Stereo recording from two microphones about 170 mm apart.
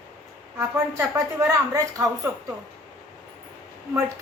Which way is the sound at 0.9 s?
15° right (ahead or behind).